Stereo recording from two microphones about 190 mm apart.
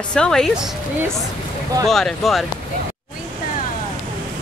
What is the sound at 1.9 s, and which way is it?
Speech, centre (ahead or behind).